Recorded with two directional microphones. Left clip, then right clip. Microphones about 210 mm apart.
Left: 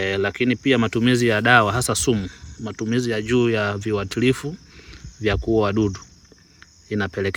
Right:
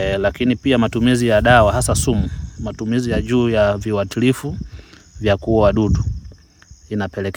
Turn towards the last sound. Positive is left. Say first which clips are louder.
# even
turn(degrees=-40)  # may be behind; listen again after turning